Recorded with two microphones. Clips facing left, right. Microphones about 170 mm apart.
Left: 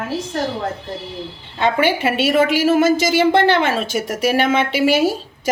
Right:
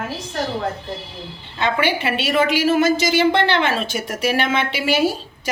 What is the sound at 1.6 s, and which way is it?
A woman's voice, 50° left (ahead or behind).